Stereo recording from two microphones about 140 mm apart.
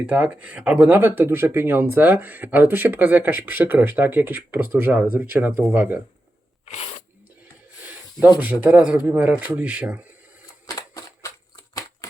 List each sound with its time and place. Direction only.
0.1 s speech: 10° right (ahead or behind)
6.7 s speech: 50° left (ahead or behind)
8.2 s speech: 10° right (ahead or behind)
10.7 s a sound: 25° left (ahead or behind)